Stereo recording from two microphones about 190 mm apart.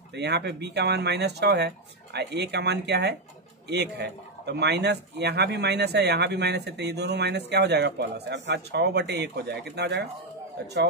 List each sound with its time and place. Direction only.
0.1 s speech: 60° right (ahead or behind)